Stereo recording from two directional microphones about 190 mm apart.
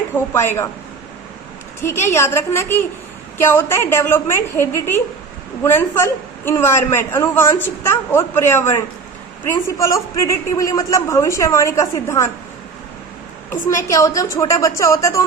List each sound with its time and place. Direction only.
0.1 s a man's voice: 10° left (ahead or behind)
1.8 s a man's voice: 10° left (ahead or behind)
13.5 s a man's voice: 15° left (ahead or behind)